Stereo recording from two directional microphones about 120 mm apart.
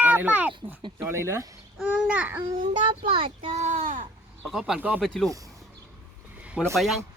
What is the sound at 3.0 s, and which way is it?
Speech, 45° right (ahead or behind).